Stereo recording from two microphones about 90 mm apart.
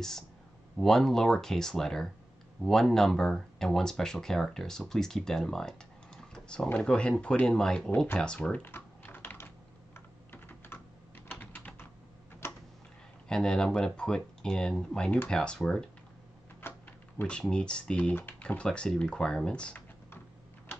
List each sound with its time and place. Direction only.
0.7 s speech: 5° left (ahead or behind)
8.6 s typing: 25° left (ahead or behind)
12.4 s tick-tock: 25° left (ahead or behind)
13.3 s speech: 10° left (ahead or behind)
16.6 s typing: 25° left (ahead or behind)
17.2 s speech: 10° left (ahead or behind)